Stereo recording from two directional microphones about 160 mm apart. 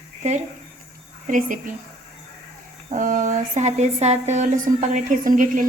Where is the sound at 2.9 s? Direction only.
55° right (ahead or behind).